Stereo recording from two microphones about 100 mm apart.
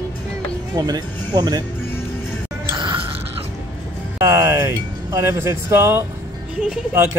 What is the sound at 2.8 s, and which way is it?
Music, 55° right (ahead or behind).